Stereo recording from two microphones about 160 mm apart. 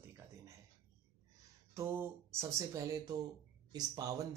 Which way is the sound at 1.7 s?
15° right (ahead or behind).